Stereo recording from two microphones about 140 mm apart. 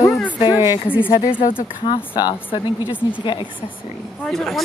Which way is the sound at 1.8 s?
35° left (ahead or behind).